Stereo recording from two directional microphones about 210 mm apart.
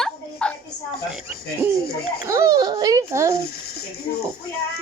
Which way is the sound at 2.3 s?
15° right (ahead or behind).